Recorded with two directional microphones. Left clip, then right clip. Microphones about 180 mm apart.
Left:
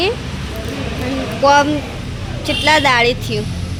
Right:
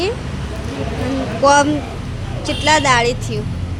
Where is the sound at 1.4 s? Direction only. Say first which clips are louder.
Left 1 dB; 15° right (ahead or behind).